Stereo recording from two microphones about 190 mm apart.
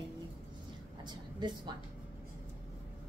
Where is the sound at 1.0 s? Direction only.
25° right (ahead or behind).